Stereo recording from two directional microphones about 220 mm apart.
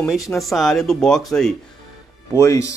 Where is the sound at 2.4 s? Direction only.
15° left (ahead or behind).